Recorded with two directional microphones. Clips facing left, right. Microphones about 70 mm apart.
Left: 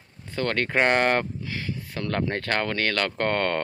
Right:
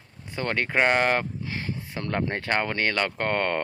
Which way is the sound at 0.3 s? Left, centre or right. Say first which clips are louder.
Left 2 dB; centre.